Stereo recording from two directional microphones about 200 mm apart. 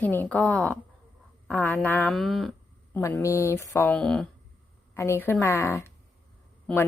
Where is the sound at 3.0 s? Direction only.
15° left (ahead or behind).